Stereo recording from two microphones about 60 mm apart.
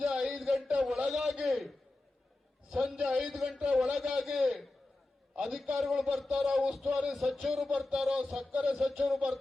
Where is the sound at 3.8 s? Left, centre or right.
Centre.